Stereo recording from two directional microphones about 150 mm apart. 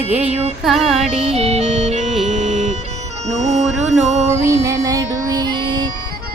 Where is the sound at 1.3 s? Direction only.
45° right (ahead or behind).